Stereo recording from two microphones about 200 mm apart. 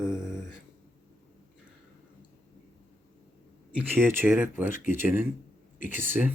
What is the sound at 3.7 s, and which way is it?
Speech, 10° right (ahead or behind).